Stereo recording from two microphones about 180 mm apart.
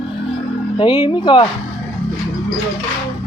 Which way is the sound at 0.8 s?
25° left (ahead or behind).